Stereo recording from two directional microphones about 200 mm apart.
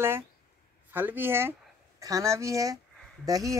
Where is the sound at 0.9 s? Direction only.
10° right (ahead or behind).